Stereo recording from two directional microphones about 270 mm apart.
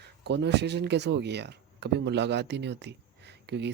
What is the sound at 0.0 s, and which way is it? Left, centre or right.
Speech, right.